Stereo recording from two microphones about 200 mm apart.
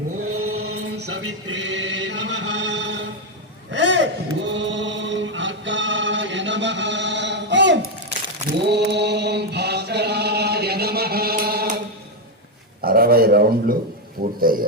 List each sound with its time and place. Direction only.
0.2 s chant: 90° right; by 7.9 s 65° right (ahead or behind)
8.6 s mantra: 55° right (ahead or behind)
12.8 s a sound: 50° right (ahead or behind)
14.2 s a man's voice: 45° right (ahead or behind)